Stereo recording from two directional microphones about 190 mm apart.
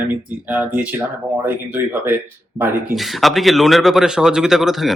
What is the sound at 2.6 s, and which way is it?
Speech, 15° right (ahead or behind).